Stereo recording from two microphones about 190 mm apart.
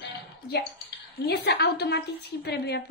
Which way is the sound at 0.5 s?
60° left (ahead or behind).